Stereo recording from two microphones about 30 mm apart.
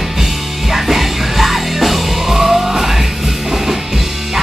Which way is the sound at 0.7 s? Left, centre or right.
Centre.